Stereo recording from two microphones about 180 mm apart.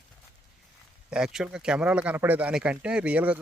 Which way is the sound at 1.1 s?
5° right (ahead or behind).